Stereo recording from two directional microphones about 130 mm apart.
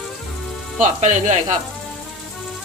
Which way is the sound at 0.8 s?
70° right (ahead or behind).